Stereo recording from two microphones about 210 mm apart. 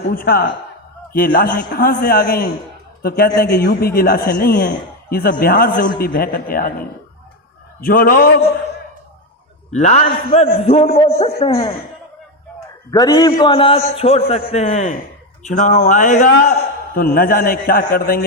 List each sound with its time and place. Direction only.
0.1 s a man's voice: 45° left (ahead or behind)
9.7 s a man's voice: 35° left (ahead or behind)
12.9 s a man's voice: 20° left (ahead or behind); by 18.2 s 45° left (ahead or behind)